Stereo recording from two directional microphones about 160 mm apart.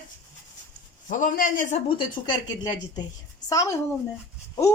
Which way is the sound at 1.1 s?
55° left (ahead or behind).